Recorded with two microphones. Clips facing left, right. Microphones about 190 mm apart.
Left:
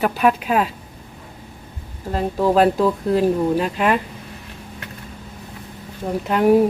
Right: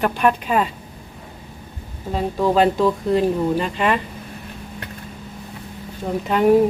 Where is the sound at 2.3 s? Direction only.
5° left (ahead or behind).